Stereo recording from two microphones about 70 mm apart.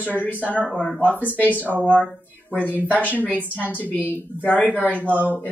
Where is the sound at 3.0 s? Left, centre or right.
Left.